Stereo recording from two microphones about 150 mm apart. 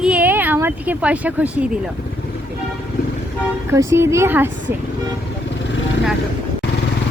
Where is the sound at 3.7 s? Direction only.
20° right (ahead or behind).